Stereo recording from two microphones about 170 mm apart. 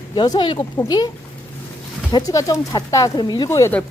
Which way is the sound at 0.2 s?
30° left (ahead or behind).